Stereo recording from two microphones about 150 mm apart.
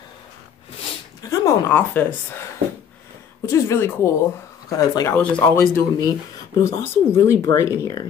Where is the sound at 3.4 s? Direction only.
15° left (ahead or behind).